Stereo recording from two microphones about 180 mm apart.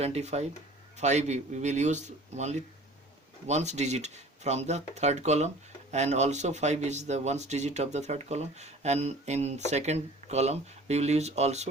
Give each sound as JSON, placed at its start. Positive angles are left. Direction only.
{"t": 0.0, "sound": "speech", "side_deg": -35}